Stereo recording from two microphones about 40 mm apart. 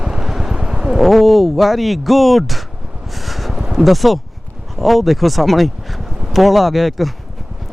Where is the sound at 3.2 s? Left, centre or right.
Centre.